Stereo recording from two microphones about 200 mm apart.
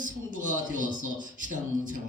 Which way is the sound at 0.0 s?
40° right (ahead or behind).